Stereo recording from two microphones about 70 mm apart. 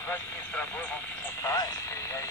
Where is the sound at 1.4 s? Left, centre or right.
Left.